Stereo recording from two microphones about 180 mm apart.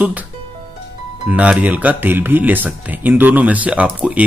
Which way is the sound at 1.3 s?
5° right (ahead or behind).